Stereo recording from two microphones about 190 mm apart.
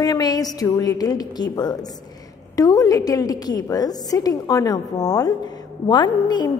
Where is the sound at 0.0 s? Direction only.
20° left (ahead or behind).